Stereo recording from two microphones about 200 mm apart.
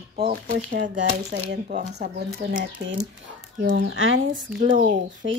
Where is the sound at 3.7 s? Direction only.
65° right (ahead or behind).